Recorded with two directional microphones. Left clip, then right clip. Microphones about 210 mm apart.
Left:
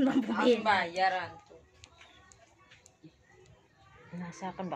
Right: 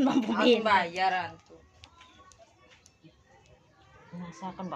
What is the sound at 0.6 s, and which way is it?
Speech, 55° right (ahead or behind).